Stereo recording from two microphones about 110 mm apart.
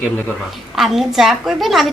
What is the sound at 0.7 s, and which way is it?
A woman's voice, centre (ahead or behind).